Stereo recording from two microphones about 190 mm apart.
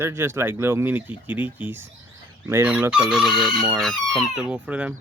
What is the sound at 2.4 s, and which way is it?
Chicken, 10° right (ahead or behind).